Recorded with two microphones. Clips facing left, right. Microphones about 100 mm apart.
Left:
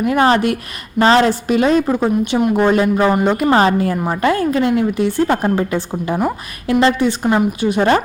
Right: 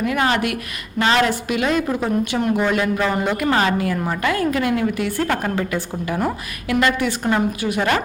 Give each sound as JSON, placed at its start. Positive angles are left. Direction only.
{"t": 0.0, "sound": "a woman's voice", "side_deg": 30}
{"t": 3.1, "sound": "a woman's voice", "side_deg": 20}
{"t": 3.4, "sound": "a woman's voice", "side_deg": 30}